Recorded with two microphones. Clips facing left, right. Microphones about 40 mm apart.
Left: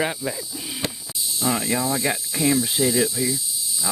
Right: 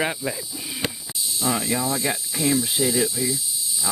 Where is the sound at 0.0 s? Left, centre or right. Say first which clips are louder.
Even; centre.